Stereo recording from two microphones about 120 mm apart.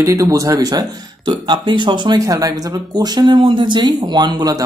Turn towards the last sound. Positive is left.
turn(degrees=-35)  # may be behind; listen again after turning